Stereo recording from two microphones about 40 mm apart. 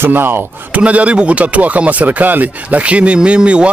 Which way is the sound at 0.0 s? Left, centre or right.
Right.